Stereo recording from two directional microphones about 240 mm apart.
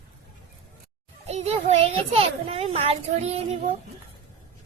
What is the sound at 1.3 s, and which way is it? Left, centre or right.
A child's voice, right.